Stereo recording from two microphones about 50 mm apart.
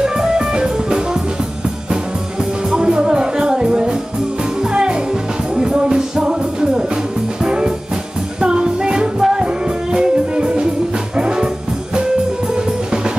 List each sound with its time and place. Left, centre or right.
0.0 s music: centre
2.7 s music: centre